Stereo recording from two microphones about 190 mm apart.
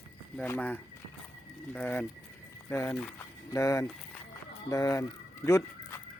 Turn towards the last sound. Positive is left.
turn(degrees=15)  # may be behind; listen again after turning